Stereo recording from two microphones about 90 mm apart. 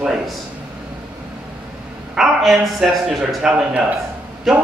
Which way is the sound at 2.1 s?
5° right (ahead or behind).